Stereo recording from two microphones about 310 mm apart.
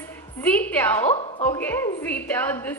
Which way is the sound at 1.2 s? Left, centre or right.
Centre.